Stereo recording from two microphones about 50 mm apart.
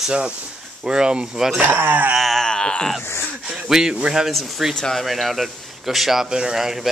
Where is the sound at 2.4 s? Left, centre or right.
Centre.